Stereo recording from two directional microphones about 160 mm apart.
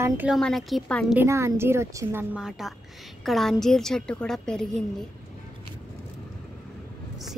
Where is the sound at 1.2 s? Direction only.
15° right (ahead or behind); by 4.8 s 5° left (ahead or behind).